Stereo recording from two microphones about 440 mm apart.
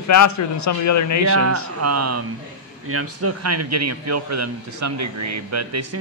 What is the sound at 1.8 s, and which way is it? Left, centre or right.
A man's voice, right.